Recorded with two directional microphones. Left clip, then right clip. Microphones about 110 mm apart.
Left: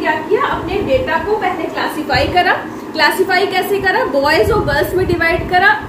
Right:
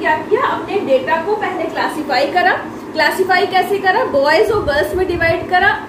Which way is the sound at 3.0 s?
50° left (ahead or behind).